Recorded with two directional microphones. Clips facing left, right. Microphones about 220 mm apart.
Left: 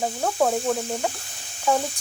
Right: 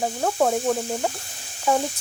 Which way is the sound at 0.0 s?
5° right (ahead or behind).